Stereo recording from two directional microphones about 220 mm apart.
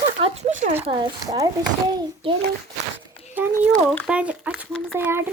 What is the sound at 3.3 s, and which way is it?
Speech, 10° right (ahead or behind).